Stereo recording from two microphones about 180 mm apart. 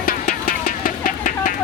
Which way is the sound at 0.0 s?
50° left (ahead or behind).